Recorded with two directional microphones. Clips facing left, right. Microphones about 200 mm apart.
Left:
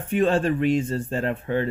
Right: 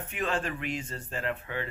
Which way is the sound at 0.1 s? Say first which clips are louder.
Left 12 dB; 30° left (ahead or behind).